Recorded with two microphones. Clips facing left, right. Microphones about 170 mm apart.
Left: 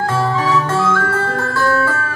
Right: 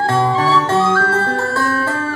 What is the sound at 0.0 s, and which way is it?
Music, 30° right (ahead or behind).